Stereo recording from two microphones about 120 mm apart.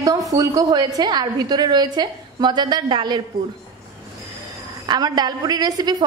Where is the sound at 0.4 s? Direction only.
30° right (ahead or behind).